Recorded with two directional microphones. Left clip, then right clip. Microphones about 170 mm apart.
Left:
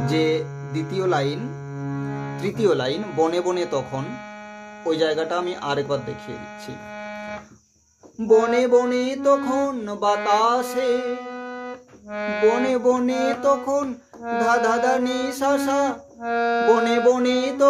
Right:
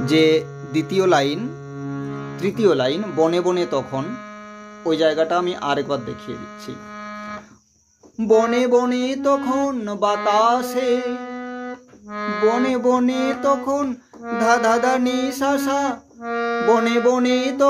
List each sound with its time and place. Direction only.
0.0 s speech: 45° right (ahead or behind)
1.8 s music: 20° right (ahead or behind)
2.3 s speech: 30° right (ahead or behind)
8.2 s speech: 40° right (ahead or behind)
11.3 s music: 10° right (ahead or behind)
12.1 s brass instrument: 15° right (ahead or behind)
12.6 s speech: 35° right (ahead or behind)
16.3 s brass instrument: 10° right (ahead or behind)
16.7 s speech: 35° right (ahead or behind)